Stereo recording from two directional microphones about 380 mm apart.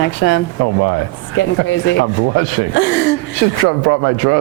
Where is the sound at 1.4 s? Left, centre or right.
Left.